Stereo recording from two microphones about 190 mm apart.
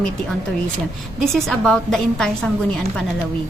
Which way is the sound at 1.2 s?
Centre (ahead or behind).